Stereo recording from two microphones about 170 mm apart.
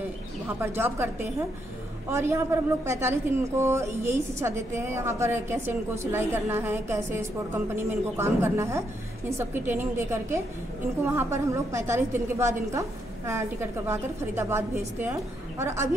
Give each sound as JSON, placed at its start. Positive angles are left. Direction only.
{"t": 0.6, "sound": "a woman's voice", "side_deg": -15}